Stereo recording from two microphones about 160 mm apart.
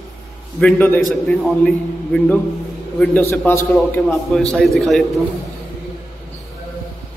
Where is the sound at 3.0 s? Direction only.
10° left (ahead or behind).